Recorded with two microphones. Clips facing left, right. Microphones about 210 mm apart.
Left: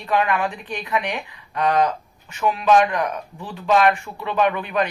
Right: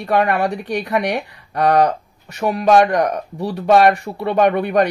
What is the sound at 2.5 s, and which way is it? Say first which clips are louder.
Speech: right 5 dB; 45° right (ahead or behind).